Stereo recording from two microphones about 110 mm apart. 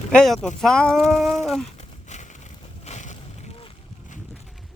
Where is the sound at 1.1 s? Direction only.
Centre (ahead or behind).